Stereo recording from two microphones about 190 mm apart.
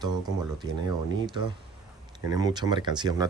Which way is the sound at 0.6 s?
20° right (ahead or behind).